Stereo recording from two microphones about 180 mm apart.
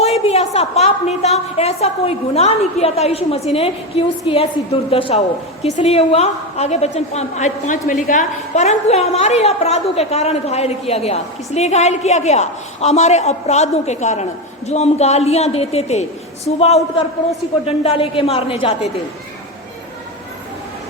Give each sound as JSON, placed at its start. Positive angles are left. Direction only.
{"t": 0.0, "sound": "a woman's voice", "side_deg": 35}